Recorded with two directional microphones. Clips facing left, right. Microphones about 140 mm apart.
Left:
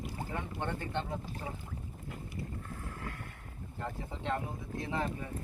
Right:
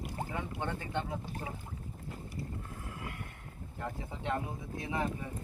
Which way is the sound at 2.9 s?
15° right (ahead or behind).